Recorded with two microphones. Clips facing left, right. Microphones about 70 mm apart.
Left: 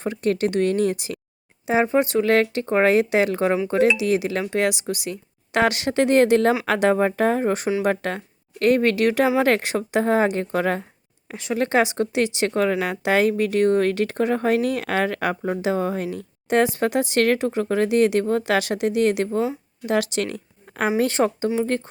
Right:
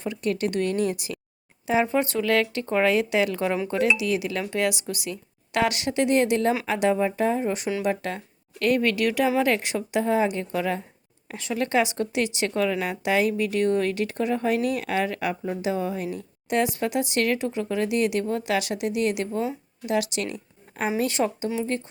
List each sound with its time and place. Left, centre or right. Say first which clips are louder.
0.0 s a woman's voice: left 4 dB; left
11.3 s speech: left 4 dB; left
12.7 s a woman's voice: left 4 dB; left
13.0 s speech: left 3 dB; left
17.6 s speech: left 6 dB; left
20.7 s a sound: left 5 dB; left
21.0 s speech: left 4 dB; left